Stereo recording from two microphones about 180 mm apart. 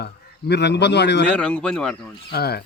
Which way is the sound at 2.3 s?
60° left (ahead or behind).